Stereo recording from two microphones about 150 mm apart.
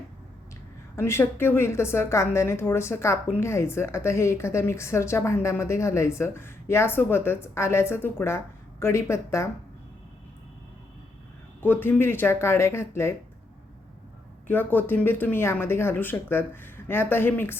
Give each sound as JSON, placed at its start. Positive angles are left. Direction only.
{"t": 0.9, "sound": "a woman's voice", "side_deg": 15}
{"t": 11.6, "sound": "a woman's voice", "side_deg": 15}
{"t": 14.4, "sound": "a woman's voice", "side_deg": 15}